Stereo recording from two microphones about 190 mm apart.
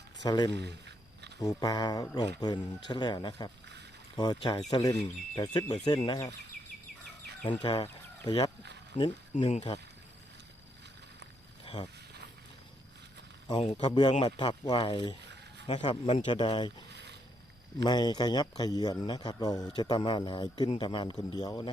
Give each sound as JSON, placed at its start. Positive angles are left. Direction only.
{"t": 0.2, "sound": "a man's voice", "side_deg": 20}
{"t": 0.5, "sound": "a sound", "side_deg": -65}
{"t": 1.4, "sound": "a man's voice", "side_deg": 20}
{"t": 7.4, "sound": "speech", "side_deg": 25}
{"t": 9.4, "sound": "speech", "side_deg": 30}
{"t": 11.6, "sound": "a sound", "side_deg": 30}
{"t": 13.5, "sound": "a man's voice", "side_deg": 30}
{"t": 16.9, "sound": "a sound", "side_deg": -65}
{"t": 17.8, "sound": "a man's voice", "side_deg": 20}